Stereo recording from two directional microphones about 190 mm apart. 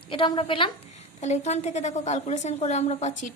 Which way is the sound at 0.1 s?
25° left (ahead or behind).